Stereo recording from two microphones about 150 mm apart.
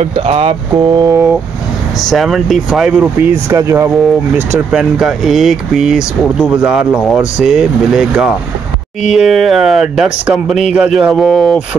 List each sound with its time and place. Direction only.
0.1 s speech: 40° right (ahead or behind)
0.7 s speech: 25° right (ahead or behind)
2.0 s speech: centre (ahead or behind)